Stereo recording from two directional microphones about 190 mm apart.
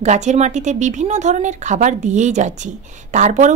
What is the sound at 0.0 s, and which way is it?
Speech, 35° right (ahead or behind).